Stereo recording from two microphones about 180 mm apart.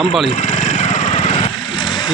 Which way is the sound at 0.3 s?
40° left (ahead or behind).